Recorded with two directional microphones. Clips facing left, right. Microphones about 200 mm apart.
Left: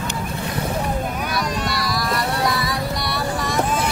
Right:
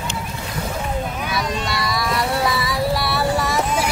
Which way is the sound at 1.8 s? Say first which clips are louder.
Right 1 dB; centre (ahead or behind).